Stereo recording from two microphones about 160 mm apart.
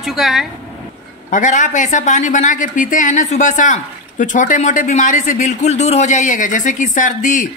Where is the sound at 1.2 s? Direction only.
55° left (ahead or behind).